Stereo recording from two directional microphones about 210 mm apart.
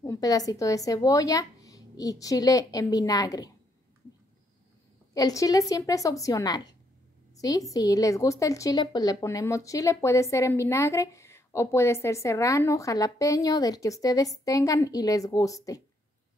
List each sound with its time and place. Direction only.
0.0 s a woman's voice: 15° left (ahead or behind)
5.1 s a woman's voice: 15° left (ahead or behind)